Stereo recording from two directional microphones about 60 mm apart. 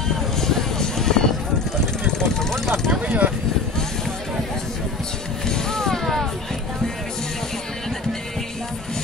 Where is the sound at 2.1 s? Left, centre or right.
Centre.